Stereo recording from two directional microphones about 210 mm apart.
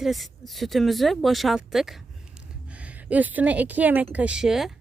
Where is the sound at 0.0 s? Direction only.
Centre (ahead or behind).